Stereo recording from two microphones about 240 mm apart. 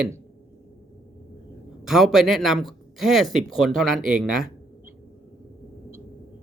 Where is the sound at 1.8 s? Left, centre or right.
Centre.